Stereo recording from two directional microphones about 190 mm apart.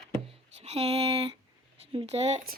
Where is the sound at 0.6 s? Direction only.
35° right (ahead or behind).